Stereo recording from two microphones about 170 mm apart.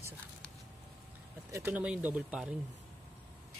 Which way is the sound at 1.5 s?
10° right (ahead or behind).